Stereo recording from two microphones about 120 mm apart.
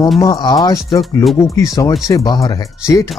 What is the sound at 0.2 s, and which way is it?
Speech, 35° left (ahead or behind).